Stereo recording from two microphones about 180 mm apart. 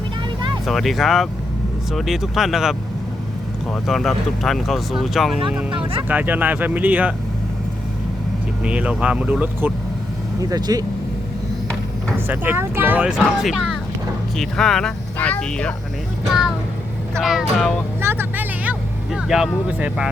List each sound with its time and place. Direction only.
0.6 s speech: centre (ahead or behind)
8.6 s speech: 5° right (ahead or behind)
10.5 s speech: 20° right (ahead or behind)
12.3 s speech: 10° right (ahead or behind); by 15.7 s 5° left (ahead or behind)
17.2 s speech: centre (ahead or behind)
18.0 s vehicle: 15° right (ahead or behind)
19.6 s speech: 5° right (ahead or behind)